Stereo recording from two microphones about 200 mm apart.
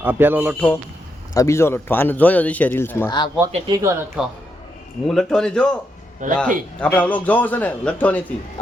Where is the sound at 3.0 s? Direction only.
20° left (ahead or behind).